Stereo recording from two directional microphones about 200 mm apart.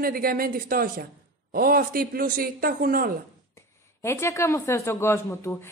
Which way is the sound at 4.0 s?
15° left (ahead or behind).